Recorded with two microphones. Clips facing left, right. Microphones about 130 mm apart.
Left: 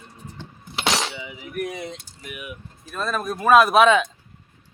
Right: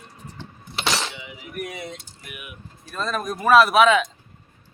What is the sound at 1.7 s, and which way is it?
Speech, 20° left (ahead or behind).